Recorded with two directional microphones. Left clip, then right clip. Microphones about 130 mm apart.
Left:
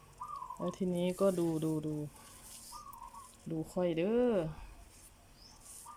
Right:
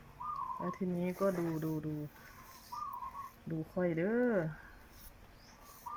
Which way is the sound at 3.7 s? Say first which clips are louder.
Left 2 dB; 25° left (ahead or behind).